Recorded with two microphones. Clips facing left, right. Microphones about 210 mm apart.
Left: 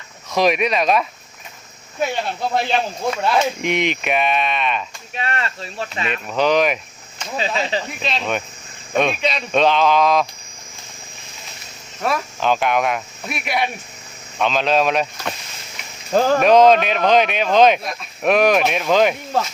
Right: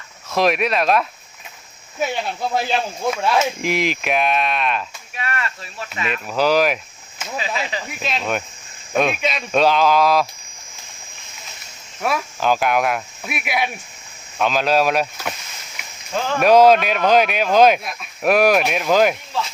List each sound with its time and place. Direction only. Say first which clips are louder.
0.3 s speech: left 1 dB; centre (ahead or behind)
2.6 s speech: left 1 dB; 5° right (ahead or behind)
5.1 s speech: left 2 dB; 25° left (ahead or behind)
6.2 s speech: even; 5° right (ahead or behind)
7.3 s speech: left 4 dB; 30° left (ahead or behind)
7.9 s speech: even; centre (ahead or behind)
12.0 s speech: even; 5° right (ahead or behind)
16.1 s speech: left 7 dB; 40° left (ahead or behind)
16.4 s speech: right 2 dB; 5° right (ahead or behind)